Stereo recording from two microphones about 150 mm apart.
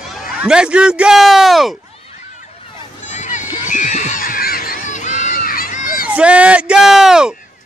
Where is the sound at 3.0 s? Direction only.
55° left (ahead or behind).